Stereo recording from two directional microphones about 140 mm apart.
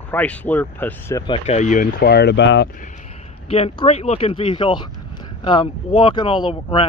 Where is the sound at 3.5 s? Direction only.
45° left (ahead or behind).